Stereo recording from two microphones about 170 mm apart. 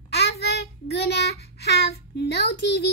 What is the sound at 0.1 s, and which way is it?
Child singing, 75° left (ahead or behind).